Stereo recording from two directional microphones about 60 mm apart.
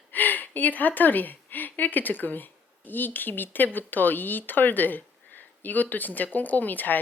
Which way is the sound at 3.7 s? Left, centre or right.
Left.